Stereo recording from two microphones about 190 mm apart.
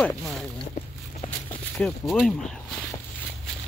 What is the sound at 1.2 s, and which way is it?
Walk, 35° left (ahead or behind).